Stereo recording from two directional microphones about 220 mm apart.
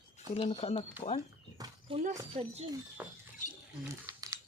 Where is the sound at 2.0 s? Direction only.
35° right (ahead or behind).